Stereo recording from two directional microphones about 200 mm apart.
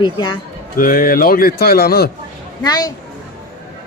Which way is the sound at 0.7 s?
45° left (ahead or behind).